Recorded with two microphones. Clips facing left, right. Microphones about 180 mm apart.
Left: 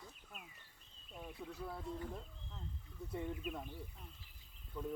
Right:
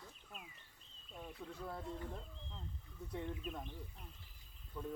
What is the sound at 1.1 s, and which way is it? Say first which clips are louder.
Speech: left 1 dB; 5° left (ahead or behind).